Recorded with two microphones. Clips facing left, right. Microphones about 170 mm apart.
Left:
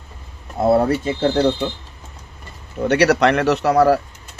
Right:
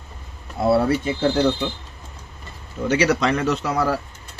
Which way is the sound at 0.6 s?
45° left (ahead or behind).